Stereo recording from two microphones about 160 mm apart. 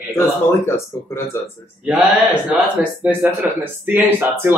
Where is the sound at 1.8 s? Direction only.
5° right (ahead or behind).